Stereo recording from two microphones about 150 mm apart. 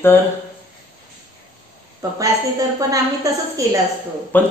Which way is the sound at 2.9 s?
20° right (ahead or behind).